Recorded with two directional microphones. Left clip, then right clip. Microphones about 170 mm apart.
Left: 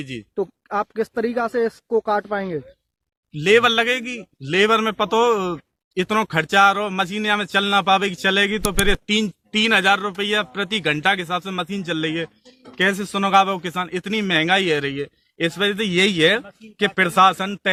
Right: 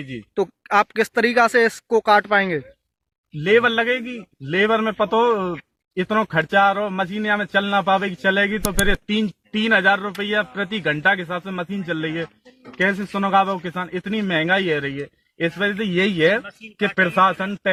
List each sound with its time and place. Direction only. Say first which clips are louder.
0.7 s speech: right 7 dB; 10° right (ahead or behind)
3.3 s a man's voice: left 1 dB; 30° left (ahead or behind)
8.6 s speech: even; centre (ahead or behind)
8.9 s speech: left 2 dB; 30° left (ahead or behind)